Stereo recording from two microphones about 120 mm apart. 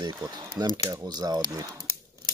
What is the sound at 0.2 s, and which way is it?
Speech, 25° right (ahead or behind).